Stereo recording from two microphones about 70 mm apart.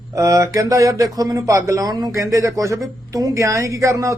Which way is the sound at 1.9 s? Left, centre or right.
Right.